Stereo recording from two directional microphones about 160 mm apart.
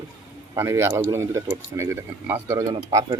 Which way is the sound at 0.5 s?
15° right (ahead or behind).